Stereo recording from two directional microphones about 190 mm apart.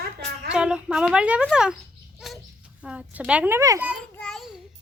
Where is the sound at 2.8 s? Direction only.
5° right (ahead or behind).